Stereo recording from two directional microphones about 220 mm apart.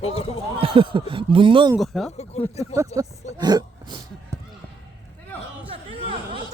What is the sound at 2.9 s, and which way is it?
Speech, 20° right (ahead or behind).